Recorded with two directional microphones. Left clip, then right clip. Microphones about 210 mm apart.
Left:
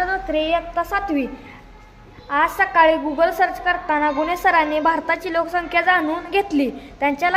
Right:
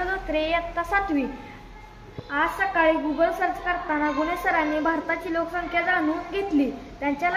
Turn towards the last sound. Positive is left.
turn(degrees=55)  # may be behind; listen again after turning